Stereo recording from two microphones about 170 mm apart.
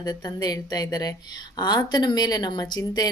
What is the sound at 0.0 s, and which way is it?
A woman's voice, 25° left (ahead or behind).